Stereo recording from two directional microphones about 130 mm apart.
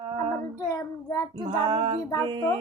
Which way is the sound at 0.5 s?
25° left (ahead or behind).